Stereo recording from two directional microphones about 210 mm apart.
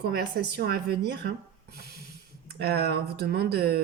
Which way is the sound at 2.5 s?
50° right (ahead or behind).